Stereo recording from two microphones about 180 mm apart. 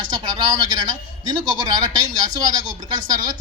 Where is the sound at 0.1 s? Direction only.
25° right (ahead or behind).